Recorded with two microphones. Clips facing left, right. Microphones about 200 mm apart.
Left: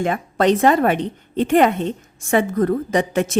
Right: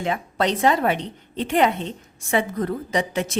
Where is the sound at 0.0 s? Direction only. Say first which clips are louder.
Left 5 dB; 50° left (ahead or behind).